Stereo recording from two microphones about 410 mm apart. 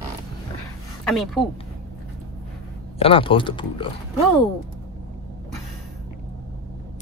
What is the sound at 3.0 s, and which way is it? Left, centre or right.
Speech, centre.